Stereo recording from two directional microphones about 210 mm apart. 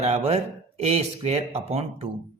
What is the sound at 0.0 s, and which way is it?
Speech, 30° right (ahead or behind).